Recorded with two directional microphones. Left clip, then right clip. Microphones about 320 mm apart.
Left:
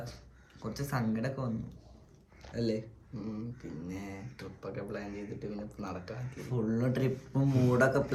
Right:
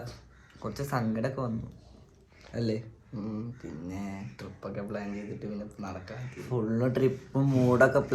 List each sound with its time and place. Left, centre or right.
0.6 s speech: centre
2.5 s speech: centre
3.2 s speech: centre
5.7 s speech: centre
6.1 s speech: centre